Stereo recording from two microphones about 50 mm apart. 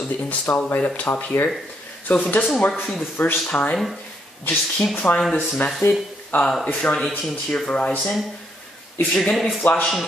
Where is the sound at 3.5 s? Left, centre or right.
Left.